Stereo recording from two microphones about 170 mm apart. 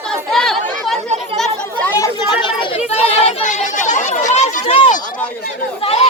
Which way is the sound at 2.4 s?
30° left (ahead or behind).